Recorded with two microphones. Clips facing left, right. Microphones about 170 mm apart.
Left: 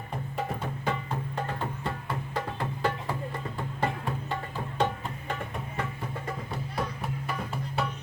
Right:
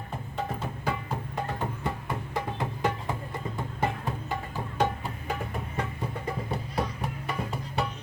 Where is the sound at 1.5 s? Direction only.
15° right (ahead or behind).